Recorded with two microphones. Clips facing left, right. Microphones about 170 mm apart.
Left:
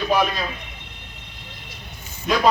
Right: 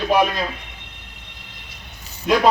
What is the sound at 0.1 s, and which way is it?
Speech, 15° right (ahead or behind).